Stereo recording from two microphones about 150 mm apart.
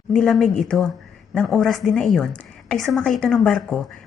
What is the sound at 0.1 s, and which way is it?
A woman's voice, centre (ahead or behind).